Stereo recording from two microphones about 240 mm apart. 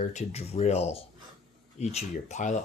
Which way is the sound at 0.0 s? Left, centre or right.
Left.